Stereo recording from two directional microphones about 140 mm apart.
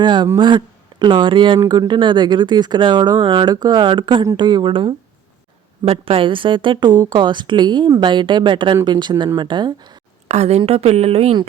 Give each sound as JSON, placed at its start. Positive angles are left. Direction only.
{"t": 0.0, "sound": "a woman's voice", "side_deg": -35}
{"t": 10.2, "sound": "a woman's voice", "side_deg": -50}